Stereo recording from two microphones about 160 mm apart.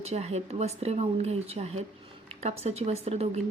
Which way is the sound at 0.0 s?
45° right (ahead or behind).